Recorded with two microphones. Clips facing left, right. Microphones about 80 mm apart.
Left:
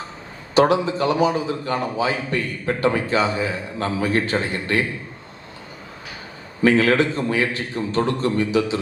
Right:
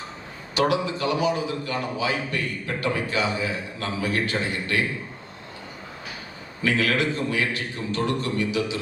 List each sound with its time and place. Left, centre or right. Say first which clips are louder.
0.5 s a man's voice: left 6 dB; left
6.6 s a man's voice: left 7 dB; left